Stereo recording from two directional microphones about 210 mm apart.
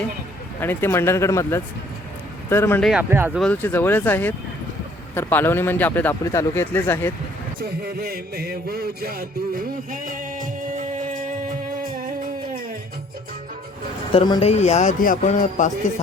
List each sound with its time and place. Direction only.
0.6 s a man's voice: 10° left (ahead or behind)
2.9 s speech: 10° right (ahead or behind)
3.4 s a man's voice: 10° left (ahead or behind)
7.6 s music: 45° right (ahead or behind)
14.1 s speech: 25° left (ahead or behind)